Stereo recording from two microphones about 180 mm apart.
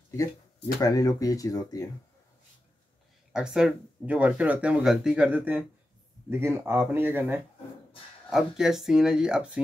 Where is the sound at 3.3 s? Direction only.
5° right (ahead or behind).